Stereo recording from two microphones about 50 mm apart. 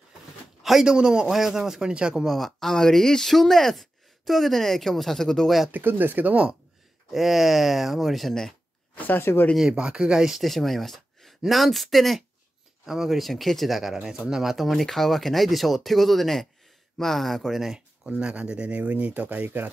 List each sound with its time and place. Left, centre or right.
0.6 s a sound: centre
0.8 s speech: centre
2.2 s speech: centre
5.7 s speech: right
7.1 s speech: centre
8.9 s speech: left
9.2 s speech: left
9.6 s speech: centre
10.4 s speech: centre
18.0 s speech: right